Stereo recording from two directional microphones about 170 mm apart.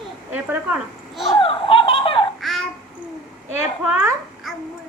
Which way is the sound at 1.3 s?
30° left (ahead or behind).